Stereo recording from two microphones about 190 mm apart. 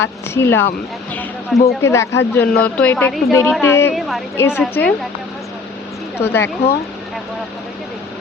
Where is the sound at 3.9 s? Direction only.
Centre (ahead or behind).